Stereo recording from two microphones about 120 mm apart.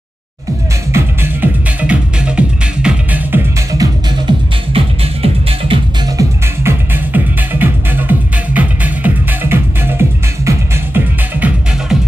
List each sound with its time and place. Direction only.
0.9 s music: 15° right (ahead or behind)
3.7 s music: 30° right (ahead or behind)
4.7 s music: 50° right (ahead or behind)
6.1 s music: 20° right (ahead or behind)